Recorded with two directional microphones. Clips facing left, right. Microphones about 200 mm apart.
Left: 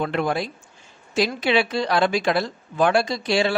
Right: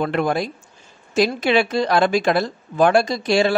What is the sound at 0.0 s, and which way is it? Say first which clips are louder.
A man's voice: right 3 dB; 45° right (ahead or behind).